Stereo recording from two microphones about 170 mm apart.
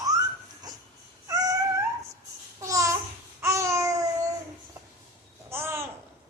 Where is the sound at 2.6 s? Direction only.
20° right (ahead or behind).